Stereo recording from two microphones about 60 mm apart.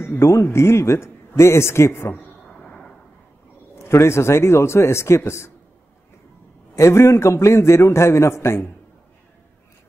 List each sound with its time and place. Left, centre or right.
0.2 s a man's voice: left
2.4 s arrow: centre
3.8 s a man's voice: left
6.7 s a man's voice: left